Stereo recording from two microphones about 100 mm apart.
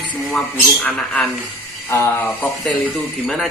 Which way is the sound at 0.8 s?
15° left (ahead or behind).